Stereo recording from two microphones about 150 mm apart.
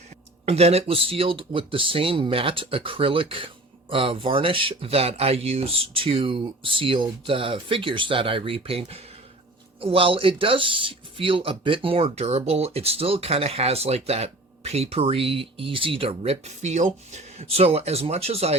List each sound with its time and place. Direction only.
0.4 s speech: 45° right (ahead or behind)